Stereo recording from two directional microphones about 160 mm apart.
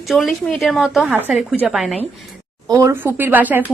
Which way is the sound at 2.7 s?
20° right (ahead or behind).